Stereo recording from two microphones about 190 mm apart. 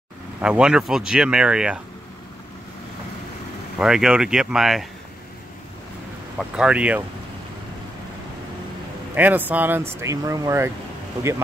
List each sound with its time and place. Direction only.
0.4 s speech: 5° right (ahead or behind)
3.7 s speech: 5° right (ahead or behind)
6.3 s speech: 5° right (ahead or behind)
9.1 s speech: 10° right (ahead or behind)